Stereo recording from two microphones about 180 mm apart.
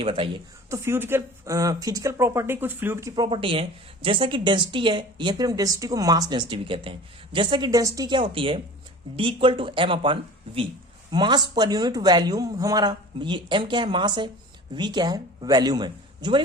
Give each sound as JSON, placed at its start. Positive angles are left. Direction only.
{"t": 0.0, "sound": "speech", "side_deg": -30}
{"t": 0.7, "sound": "speech", "side_deg": -15}
{"t": 3.2, "sound": "speech", "side_deg": -30}